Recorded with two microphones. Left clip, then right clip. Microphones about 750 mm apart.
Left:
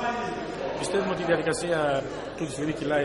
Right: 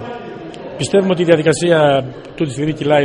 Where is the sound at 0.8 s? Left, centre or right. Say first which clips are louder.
Right 14 dB; right.